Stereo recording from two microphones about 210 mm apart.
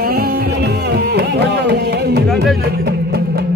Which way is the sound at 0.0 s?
45° right (ahead or behind).